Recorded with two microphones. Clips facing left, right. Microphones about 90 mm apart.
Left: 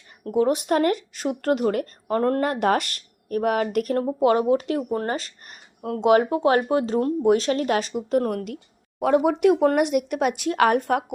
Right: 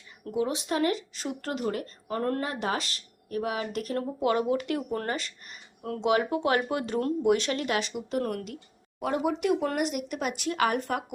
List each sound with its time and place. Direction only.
0.3 s speech: 50° left (ahead or behind)